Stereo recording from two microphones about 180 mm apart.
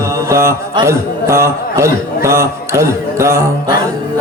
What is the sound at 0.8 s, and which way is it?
A man's voice, 15° right (ahead or behind).